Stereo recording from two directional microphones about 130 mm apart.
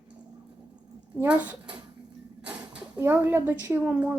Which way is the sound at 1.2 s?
10° right (ahead or behind).